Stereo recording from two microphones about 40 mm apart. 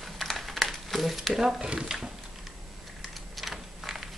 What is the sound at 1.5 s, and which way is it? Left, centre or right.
Speech, centre.